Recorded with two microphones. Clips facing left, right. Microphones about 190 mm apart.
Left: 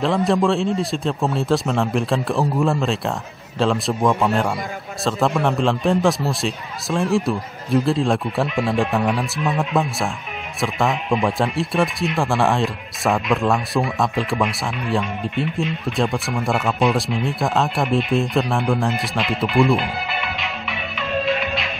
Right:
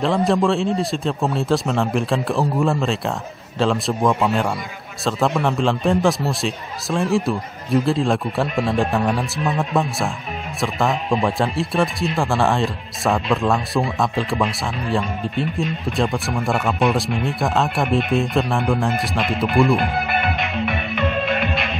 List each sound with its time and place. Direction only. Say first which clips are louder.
0.0 s speech: even; centre (ahead or behind)
14.9 s speech: even; centre (ahead or behind)
19.8 s music: right 5 dB; 55° right (ahead or behind)